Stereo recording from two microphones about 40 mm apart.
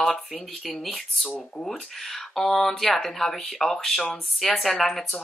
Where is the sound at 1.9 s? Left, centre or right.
Centre.